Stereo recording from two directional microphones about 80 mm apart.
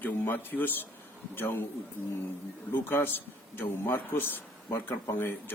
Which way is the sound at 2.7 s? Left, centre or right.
Left.